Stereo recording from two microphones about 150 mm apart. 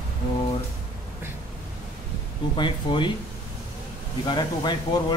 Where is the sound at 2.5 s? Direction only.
30° left (ahead or behind).